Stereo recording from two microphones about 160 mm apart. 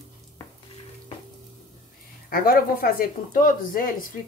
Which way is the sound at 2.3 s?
65° left (ahead or behind).